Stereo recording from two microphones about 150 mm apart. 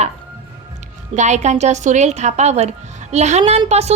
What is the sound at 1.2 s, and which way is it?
A woman's voice, 50° right (ahead or behind).